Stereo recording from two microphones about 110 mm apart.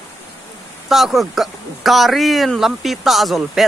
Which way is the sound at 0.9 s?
Centre (ahead or behind).